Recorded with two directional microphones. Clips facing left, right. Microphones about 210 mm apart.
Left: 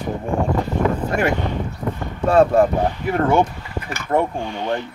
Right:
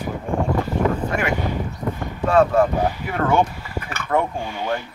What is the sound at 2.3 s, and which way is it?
Speech, 35° left (ahead or behind).